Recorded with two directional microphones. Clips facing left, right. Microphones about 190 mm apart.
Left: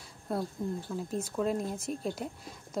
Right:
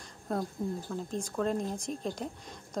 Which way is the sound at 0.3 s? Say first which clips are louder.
Even; 5° left (ahead or behind).